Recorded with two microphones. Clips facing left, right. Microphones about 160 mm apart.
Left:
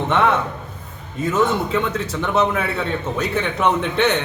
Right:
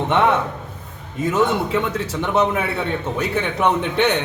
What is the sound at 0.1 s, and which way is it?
A man's voice, 15° right (ahead or behind).